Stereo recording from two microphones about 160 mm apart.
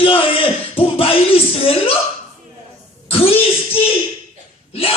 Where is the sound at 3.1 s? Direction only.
35° left (ahead or behind).